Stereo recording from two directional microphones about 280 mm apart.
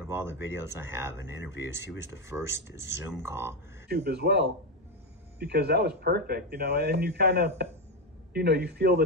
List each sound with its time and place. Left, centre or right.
0.0 s speech: centre
3.9 s speech: right